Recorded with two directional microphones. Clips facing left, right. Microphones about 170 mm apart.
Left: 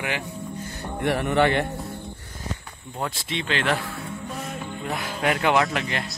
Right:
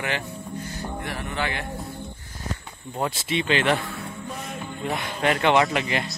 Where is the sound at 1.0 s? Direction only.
65° left (ahead or behind).